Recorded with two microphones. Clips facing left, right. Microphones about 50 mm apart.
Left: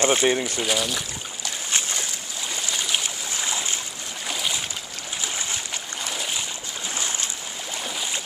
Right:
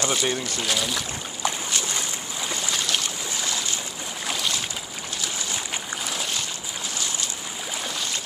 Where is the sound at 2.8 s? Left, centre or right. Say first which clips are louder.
Even; centre.